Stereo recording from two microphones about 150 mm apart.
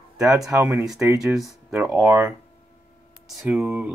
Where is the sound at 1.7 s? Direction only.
5° right (ahead or behind).